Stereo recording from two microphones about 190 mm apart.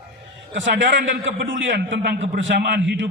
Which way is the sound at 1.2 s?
75° right (ahead or behind).